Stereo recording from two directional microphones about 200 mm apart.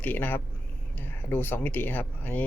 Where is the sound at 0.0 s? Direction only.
10° left (ahead or behind).